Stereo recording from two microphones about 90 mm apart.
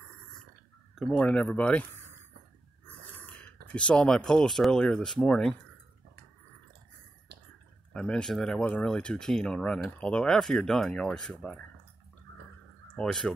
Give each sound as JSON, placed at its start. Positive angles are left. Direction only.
{"t": 0.9, "sound": "speech", "side_deg": 5}
{"t": 2.9, "sound": "speech", "side_deg": 15}
{"t": 7.9, "sound": "speech", "side_deg": 10}
{"t": 13.0, "sound": "speech", "side_deg": 5}